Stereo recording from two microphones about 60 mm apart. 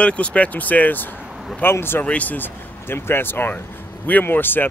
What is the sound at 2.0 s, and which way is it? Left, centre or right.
Speech, left.